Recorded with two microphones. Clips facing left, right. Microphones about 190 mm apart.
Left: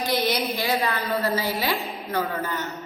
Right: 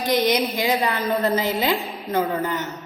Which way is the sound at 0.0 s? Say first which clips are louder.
Right 4 dB; 20° right (ahead or behind).